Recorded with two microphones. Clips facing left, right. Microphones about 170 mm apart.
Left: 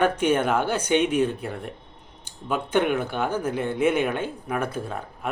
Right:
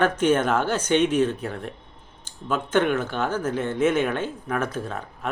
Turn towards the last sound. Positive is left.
turn(degrees=10)  # may be behind; listen again after turning